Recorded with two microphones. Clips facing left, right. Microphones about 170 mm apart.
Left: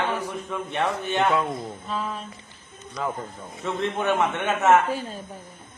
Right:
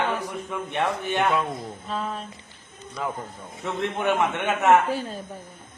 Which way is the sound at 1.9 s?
40° right (ahead or behind).